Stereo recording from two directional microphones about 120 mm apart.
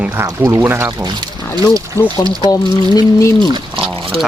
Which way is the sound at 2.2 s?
30° right (ahead or behind).